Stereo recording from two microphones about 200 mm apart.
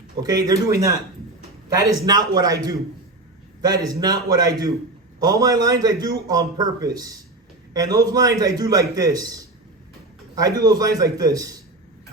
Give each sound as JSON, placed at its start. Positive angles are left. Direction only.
{"t": 0.2, "sound": "a man's voice", "side_deg": -20}